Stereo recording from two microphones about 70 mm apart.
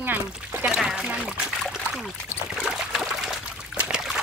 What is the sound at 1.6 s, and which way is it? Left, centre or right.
Trickle, centre.